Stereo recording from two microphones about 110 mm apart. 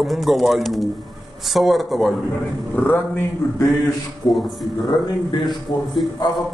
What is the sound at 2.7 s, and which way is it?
Speech, 15° left (ahead or behind).